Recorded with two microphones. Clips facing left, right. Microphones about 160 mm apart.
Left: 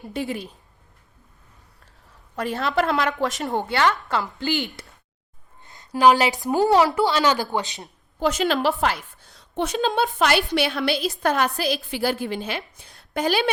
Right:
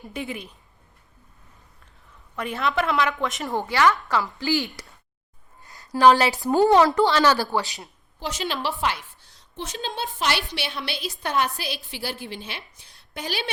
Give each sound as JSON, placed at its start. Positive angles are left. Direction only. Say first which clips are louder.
{"t": 0.1, "sound": "a woman's voice", "louder": "left 4 dB", "side_deg": 35}
{"t": 2.3, "sound": "a woman's voice", "louder": "left 2 dB", "side_deg": 40}
{"t": 3.4, "sound": "a woman's voice", "louder": "right 2 dB", "side_deg": 20}
{"t": 8.2, "sound": "a woman's voice", "louder": "left 8 dB", "side_deg": 50}
{"t": 9.6, "sound": "a woman's voice", "louder": "left 9 dB", "side_deg": 60}
{"t": 10.2, "sound": "a woman's voice", "louder": "left 4 dB", "side_deg": 50}
{"t": 10.9, "sound": "a woman's voice", "louder": "left 7 dB", "side_deg": 0}
{"t": 11.2, "sound": "a woman's voice", "louder": "even", "side_deg": 45}